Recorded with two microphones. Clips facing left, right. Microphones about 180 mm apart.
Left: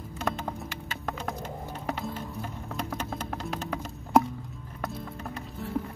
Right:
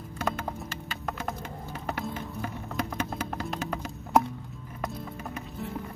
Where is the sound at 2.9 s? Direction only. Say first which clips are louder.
Right 2 dB; centre (ahead or behind).